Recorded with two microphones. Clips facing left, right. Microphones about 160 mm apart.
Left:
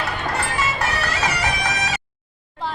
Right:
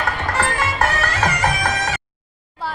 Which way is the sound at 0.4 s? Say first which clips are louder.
Right 3 dB; 50° right (ahead or behind).